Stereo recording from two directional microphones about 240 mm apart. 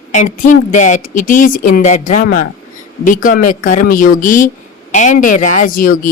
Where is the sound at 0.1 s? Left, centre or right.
Left.